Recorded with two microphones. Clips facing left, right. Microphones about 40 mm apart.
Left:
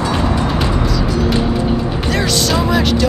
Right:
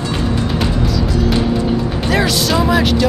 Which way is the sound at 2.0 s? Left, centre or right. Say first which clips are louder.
Right 1 dB; centre.